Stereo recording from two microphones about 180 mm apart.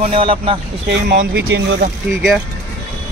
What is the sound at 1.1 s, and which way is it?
Speech, 80° right.